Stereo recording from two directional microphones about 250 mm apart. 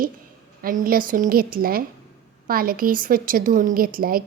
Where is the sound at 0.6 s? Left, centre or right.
Right.